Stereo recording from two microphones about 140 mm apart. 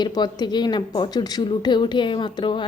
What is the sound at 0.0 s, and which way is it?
Speech, 30° left (ahead or behind).